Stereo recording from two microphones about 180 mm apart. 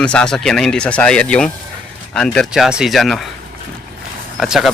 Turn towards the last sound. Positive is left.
turn(degrees=0)  # may be behind; listen again after turning